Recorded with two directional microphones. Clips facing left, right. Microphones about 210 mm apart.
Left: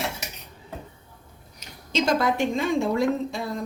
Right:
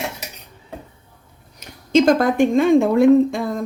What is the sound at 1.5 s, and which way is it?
Speech, 50° right (ahead or behind).